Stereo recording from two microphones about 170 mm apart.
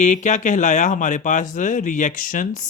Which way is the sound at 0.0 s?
45° left (ahead or behind).